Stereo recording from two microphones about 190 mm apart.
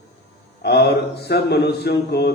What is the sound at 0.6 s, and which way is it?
Speech, 60° left (ahead or behind).